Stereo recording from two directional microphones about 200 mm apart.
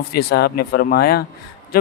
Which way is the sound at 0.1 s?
55° left (ahead or behind).